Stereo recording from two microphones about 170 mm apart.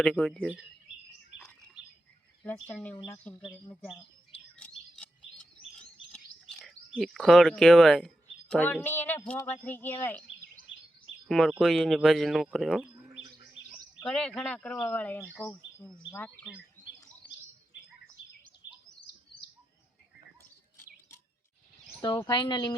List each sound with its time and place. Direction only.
0.0 s speech: 5° left (ahead or behind)
1.4 s chirp: 5° left (ahead or behind)
2.4 s speech: 10° left (ahead or behind)
4.5 s bird: 5° left (ahead or behind)
6.6 s speech: centre (ahead or behind)
11.3 s speech: centre (ahead or behind)
18.6 s bird: 90° left
22.3 s speech: 25° left (ahead or behind)